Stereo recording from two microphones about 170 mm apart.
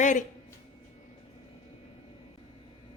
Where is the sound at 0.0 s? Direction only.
45° left (ahead or behind).